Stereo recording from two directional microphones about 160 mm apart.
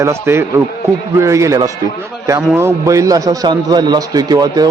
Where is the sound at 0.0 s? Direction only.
15° right (ahead or behind).